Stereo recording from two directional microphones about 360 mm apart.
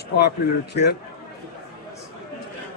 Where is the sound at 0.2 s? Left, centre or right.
Left.